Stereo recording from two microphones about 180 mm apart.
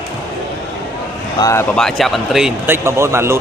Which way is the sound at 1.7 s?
Centre (ahead or behind).